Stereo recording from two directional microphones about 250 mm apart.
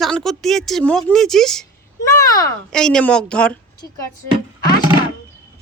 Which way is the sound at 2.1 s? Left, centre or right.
Centre.